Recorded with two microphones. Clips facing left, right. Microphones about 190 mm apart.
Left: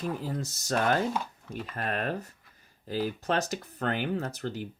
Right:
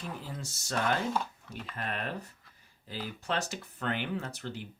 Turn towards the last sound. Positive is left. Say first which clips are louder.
# left 5 dB
turn(degrees=40)  # may be behind; listen again after turning